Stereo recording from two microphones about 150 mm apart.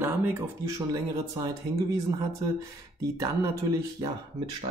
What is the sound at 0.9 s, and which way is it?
Speech, 25° right (ahead or behind).